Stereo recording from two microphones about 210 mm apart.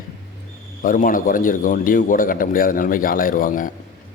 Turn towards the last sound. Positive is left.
turn(degrees=40)  # may be behind; listen again after turning